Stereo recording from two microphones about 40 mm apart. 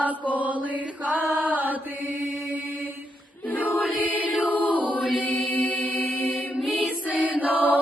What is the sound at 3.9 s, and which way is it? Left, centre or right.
Music, right.